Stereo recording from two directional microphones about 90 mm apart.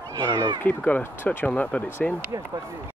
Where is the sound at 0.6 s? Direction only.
20° left (ahead or behind).